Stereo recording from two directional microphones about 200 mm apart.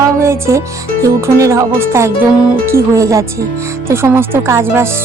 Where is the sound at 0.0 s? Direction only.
15° right (ahead or behind).